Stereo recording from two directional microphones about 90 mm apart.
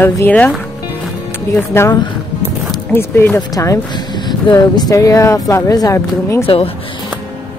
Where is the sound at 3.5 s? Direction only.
35° left (ahead or behind).